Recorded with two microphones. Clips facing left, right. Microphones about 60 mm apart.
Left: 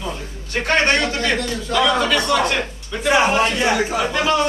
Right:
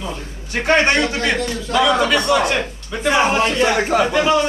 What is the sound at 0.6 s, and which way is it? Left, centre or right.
A man's voice, centre.